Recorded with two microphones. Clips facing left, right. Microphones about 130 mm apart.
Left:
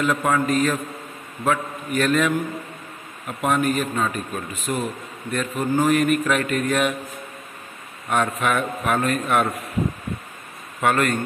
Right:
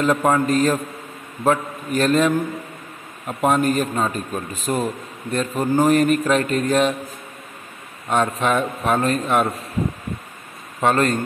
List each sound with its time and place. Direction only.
0.0 s a man's voice: 30° right (ahead or behind)
8.1 s a man's voice: 25° right (ahead or behind)
10.8 s a man's voice: 30° right (ahead or behind)